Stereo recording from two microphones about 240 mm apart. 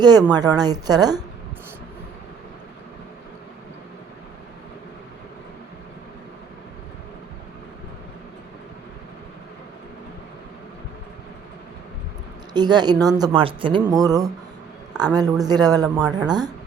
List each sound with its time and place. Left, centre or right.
0.0 s speech: centre
12.5 s speech: centre